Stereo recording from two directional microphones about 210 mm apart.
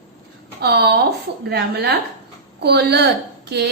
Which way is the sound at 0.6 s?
50° right (ahead or behind).